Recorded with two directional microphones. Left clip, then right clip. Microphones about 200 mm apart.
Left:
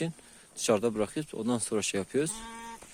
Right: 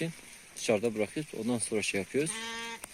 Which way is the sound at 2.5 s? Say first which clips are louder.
Right 4 dB; 35° right (ahead or behind).